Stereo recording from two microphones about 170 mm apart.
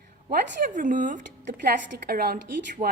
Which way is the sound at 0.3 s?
50° right (ahead or behind).